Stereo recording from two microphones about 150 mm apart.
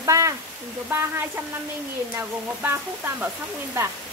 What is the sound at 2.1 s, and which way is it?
Speech, 15° right (ahead or behind).